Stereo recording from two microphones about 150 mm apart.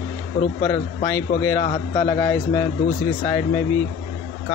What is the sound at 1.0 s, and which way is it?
A man's voice, 20° left (ahead or behind).